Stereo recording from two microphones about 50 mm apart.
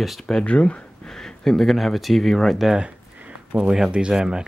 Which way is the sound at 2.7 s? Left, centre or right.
Right.